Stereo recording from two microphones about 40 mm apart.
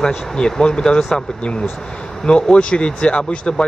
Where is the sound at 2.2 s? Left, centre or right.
Left.